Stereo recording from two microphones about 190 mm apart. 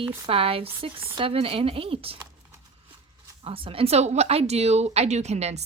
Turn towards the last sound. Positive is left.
turn(degrees=-35)  # may be behind; listen again after turning